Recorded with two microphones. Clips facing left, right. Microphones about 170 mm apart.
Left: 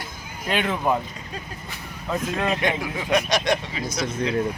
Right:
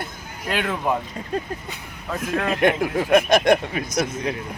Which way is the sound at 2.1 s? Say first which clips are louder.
Even; centre (ahead or behind).